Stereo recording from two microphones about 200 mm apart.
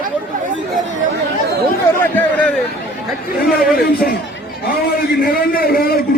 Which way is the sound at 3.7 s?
50° left (ahead or behind).